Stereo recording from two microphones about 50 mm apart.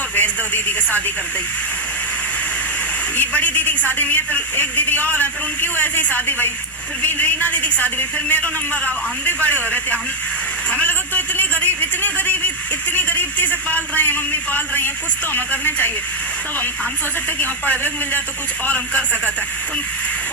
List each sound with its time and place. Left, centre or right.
0.2 s a woman's voice: left
3.2 s a man's voice: left
10.7 s a sound: left
12.9 s a man's voice: left
17.7 s a man's voice: left